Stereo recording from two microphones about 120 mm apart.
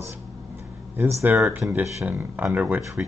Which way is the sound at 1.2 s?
20° right (ahead or behind).